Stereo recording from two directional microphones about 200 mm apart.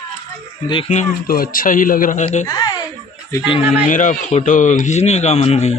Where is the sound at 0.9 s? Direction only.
40° left (ahead or behind).